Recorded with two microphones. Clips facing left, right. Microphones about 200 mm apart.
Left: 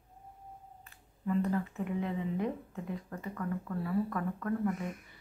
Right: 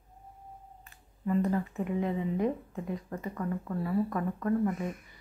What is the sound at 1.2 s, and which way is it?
Speech, 20° right (ahead or behind).